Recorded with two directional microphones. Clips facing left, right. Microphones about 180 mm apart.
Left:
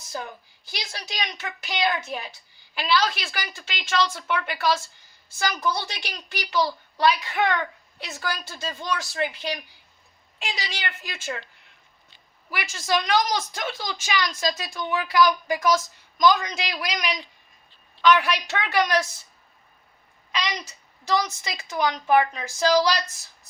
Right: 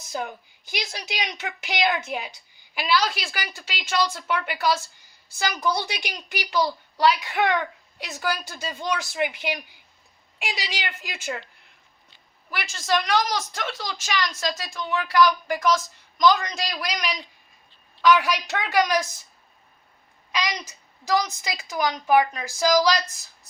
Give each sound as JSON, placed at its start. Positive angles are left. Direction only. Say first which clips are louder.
{"t": 0.1, "sound": "a woman's voice", "louder": "right 3 dB", "side_deg": -15}
{"t": 12.5, "sound": "a man's voice", "louder": "right 1 dB", "side_deg": 10}
{"t": 18.6, "sound": "a woman's voice", "louder": "right 1 dB", "side_deg": -10}
{"t": 21.2, "sound": "a woman's voice", "louder": "right 2 dB", "side_deg": -10}